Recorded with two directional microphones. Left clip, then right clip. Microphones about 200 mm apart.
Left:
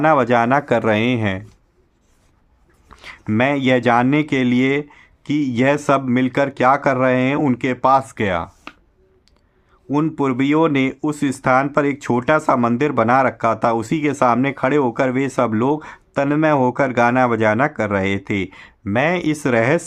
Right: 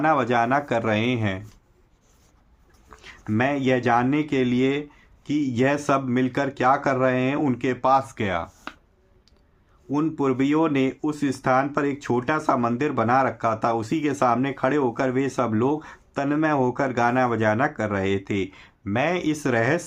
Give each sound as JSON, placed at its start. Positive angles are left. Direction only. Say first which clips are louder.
{"t": 0.0, "sound": "speech", "louder": "left 6 dB", "side_deg": 40}
{"t": 3.0, "sound": "speech", "louder": "left 6 dB", "side_deg": 45}
{"t": 8.7, "sound": "finger snapping", "louder": "even", "side_deg": 0}
{"t": 9.9, "sound": "speech", "louder": "left 4 dB", "side_deg": 45}